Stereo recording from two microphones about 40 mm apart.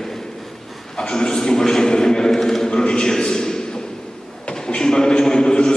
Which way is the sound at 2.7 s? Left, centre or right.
Left.